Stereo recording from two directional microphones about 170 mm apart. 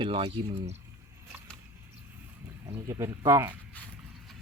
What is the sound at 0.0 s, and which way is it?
Speech, 30° right (ahead or behind).